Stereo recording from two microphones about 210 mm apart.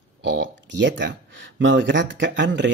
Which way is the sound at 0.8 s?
60° right (ahead or behind).